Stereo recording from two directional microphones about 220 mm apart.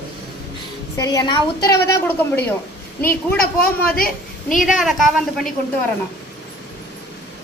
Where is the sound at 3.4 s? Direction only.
40° left (ahead or behind).